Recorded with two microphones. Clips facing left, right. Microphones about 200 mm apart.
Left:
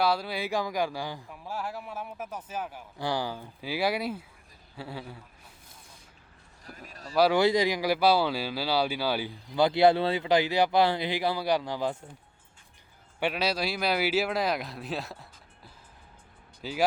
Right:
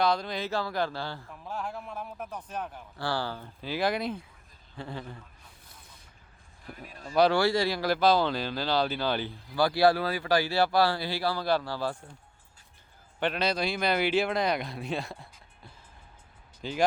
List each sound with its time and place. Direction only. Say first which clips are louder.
0.0 s speech: even; 5° left (ahead or behind)
6.8 s speech: even; 40° left (ahead or behind)
7.3 s speech: left 2 dB; 20° left (ahead or behind)
9.6 s speech: left 2 dB; 20° left (ahead or behind)
13.1 s speech: even; 10° left (ahead or behind)